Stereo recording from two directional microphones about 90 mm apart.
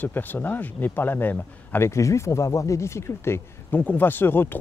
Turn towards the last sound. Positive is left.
turn(degrees=25)  # may be behind; listen again after turning